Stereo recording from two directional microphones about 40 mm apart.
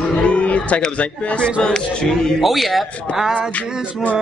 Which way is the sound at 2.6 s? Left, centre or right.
Centre.